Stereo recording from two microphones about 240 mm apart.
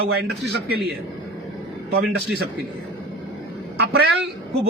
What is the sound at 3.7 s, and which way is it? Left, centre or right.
Speech, right.